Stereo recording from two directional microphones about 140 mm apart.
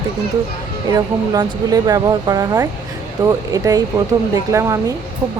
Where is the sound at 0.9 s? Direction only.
25° right (ahead or behind).